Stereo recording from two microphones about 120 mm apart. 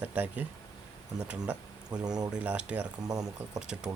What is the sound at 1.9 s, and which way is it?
Speech, 35° right (ahead or behind).